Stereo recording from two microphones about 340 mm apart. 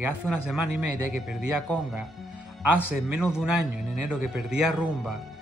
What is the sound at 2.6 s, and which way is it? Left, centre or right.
Speech, left.